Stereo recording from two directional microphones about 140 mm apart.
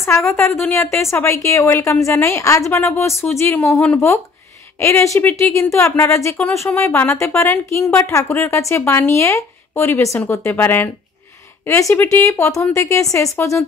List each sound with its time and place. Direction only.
0.0 s speech: 20° left (ahead or behind)